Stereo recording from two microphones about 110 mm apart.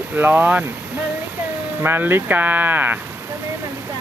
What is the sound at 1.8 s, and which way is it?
Speech, 20° right (ahead or behind).